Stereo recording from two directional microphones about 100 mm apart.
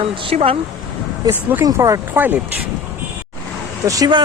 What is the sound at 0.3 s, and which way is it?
Speech, 70° right (ahead or behind).